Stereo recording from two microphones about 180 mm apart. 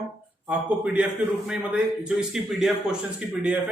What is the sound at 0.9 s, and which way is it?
A man's voice, 5° right (ahead or behind).